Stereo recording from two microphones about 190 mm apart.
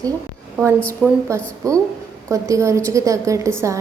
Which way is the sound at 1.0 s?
Centre (ahead or behind).